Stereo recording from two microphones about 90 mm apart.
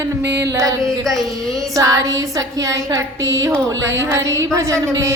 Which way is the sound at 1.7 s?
40° right (ahead or behind).